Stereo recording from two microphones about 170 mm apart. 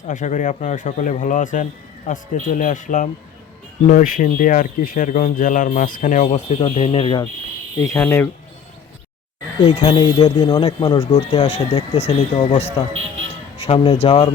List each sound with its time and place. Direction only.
0.1 s speech: 50° left (ahead or behind); by 7.3 s 30° left (ahead or behind)
7.9 s speech: 10° left (ahead or behind)
9.6 s speech: 35° left (ahead or behind)
10.2 s speech: 40° left (ahead or behind)
10.5 s speech: 25° left (ahead or behind)